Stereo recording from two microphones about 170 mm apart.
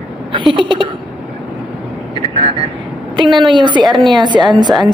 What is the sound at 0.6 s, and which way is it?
Speech, 30° right (ahead or behind).